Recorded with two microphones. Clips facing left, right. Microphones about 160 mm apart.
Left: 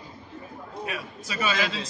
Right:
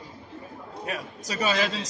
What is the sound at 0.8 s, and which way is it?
A man's voice, 40° right (ahead or behind).